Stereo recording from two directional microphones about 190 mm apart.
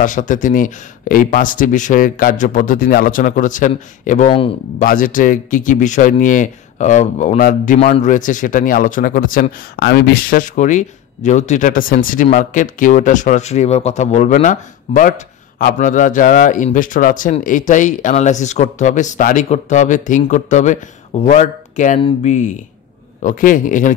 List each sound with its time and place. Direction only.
0.0 s speech: 40° left (ahead or behind)